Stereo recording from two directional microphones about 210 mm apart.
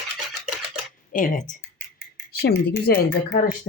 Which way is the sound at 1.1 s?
40° left (ahead or behind).